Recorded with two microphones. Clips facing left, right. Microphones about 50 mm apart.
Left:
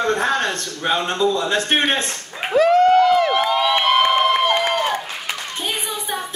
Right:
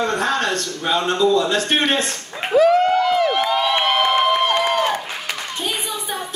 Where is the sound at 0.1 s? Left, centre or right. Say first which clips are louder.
Even; left.